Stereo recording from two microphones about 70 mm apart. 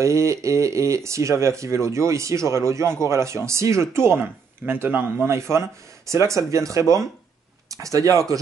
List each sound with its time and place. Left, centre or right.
0.0 s speech: right
5.2 s speech: right